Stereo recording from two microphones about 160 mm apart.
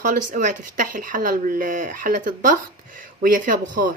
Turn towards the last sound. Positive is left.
turn(degrees=-55)  # may be behind; listen again after turning